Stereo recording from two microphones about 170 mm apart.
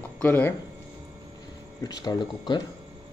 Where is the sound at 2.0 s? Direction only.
25° left (ahead or behind).